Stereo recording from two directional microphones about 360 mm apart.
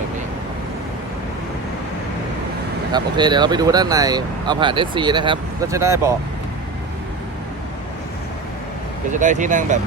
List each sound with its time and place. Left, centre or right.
2.9 s speech: centre
9.1 s speech: right